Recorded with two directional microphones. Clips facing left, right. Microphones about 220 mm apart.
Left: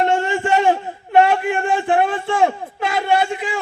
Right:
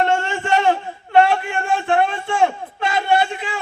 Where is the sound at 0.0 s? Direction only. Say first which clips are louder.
Left 2 dB; 15° left (ahead or behind).